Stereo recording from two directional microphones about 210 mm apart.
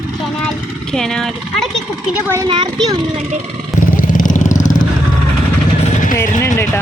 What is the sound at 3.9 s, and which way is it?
Vehicle, 40° left (ahead or behind).